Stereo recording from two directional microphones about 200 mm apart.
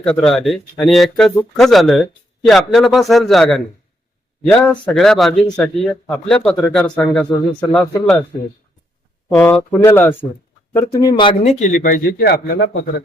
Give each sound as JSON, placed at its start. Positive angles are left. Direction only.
{"t": 0.0, "sound": "speech", "side_deg": 5}
{"t": 9.3, "sound": "speech", "side_deg": 10}
{"t": 11.1, "sound": "speech", "side_deg": 30}
{"t": 11.6, "sound": "a man's voice", "side_deg": 45}